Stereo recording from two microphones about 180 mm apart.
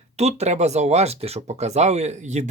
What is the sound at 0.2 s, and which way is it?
Speech, 35° right (ahead or behind).